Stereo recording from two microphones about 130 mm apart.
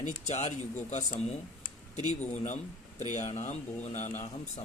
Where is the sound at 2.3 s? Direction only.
70° left (ahead or behind).